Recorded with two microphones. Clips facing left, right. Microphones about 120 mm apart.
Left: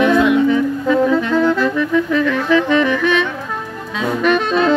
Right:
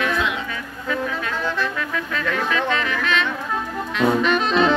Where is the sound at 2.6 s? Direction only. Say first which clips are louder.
Left 8 dB; 15° left (ahead or behind).